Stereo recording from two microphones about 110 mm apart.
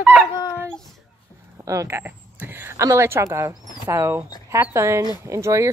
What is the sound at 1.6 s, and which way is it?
A woman's voice, 25° right (ahead or behind).